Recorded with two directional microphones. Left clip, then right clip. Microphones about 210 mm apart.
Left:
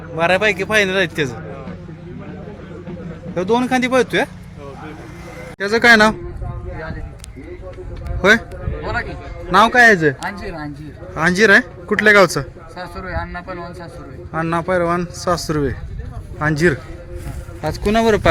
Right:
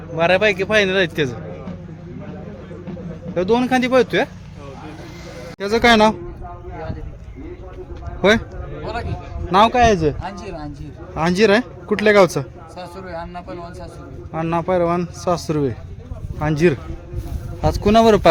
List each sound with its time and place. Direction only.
0.2 s a man's voice: 10° right (ahead or behind)
3.3 s a man's voice: 10° right (ahead or behind)
5.5 s speech: 5° right (ahead or behind)
8.2 s a man's voice: 10° right (ahead or behind)
9.5 s a man's voice: centre (ahead or behind)
10.2 s speech: 25° left (ahead or behind)
11.1 s a man's voice: 10° right (ahead or behind)
12.7 s speech: 20° left (ahead or behind)
14.3 s a man's voice: 5° right (ahead or behind)
17.6 s speech: 25° right (ahead or behind)